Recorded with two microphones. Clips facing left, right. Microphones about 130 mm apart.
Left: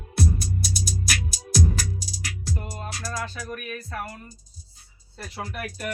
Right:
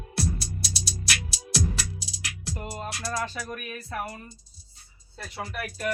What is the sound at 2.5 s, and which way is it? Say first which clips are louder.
Music: even; 20° right (ahead or behind).